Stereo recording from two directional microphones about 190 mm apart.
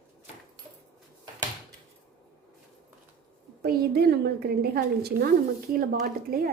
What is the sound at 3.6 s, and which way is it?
A woman's voice, 55° right (ahead or behind).